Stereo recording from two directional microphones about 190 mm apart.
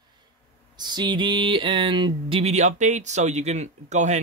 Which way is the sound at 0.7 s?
20° right (ahead or behind).